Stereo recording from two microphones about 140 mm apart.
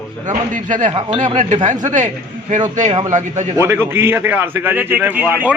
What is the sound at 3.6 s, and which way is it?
A man's voice, 20° right (ahead or behind).